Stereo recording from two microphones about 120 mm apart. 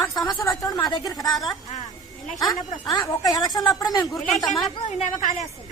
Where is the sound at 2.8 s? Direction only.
30° left (ahead or behind).